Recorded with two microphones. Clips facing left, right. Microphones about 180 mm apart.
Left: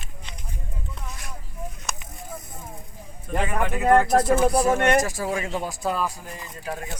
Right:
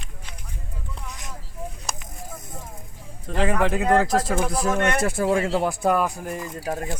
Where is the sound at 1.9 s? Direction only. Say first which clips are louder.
Even; 35° right (ahead or behind).